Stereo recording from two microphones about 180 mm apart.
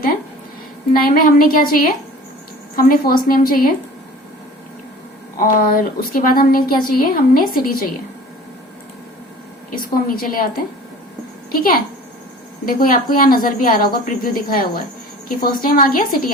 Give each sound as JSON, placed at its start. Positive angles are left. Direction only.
{"t": 1.0, "sound": "a woman's voice", "side_deg": 55}
{"t": 5.4, "sound": "a woman's voice", "side_deg": 50}
{"t": 9.7, "sound": "a woman's voice", "side_deg": 50}
{"t": 12.6, "sound": "a woman's voice", "side_deg": 50}